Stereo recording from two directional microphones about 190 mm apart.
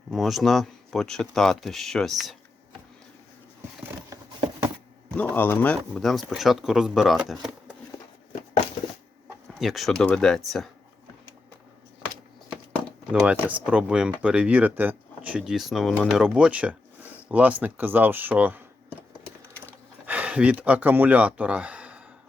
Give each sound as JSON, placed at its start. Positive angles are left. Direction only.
{"t": 0.1, "sound": "speech", "side_deg": 0}
{"t": 5.1, "sound": "speech", "side_deg": 10}
{"t": 8.3, "sound": "a sound", "side_deg": 40}
{"t": 9.6, "sound": "speech", "side_deg": 0}
{"t": 13.1, "sound": "speech", "side_deg": -5}
{"t": 20.1, "sound": "speech", "side_deg": -5}